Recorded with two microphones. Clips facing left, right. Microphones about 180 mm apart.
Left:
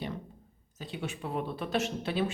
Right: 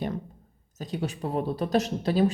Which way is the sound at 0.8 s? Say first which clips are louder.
Right 6 dB; 40° right (ahead or behind).